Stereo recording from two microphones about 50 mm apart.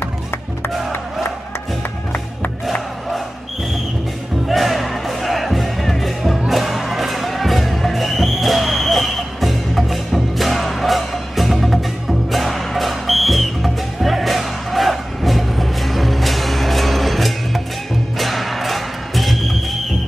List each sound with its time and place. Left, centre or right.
0.0 s music: left
4.5 s music: centre